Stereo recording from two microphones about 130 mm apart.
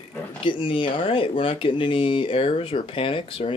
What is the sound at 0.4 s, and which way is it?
Speech, 40° left (ahead or behind).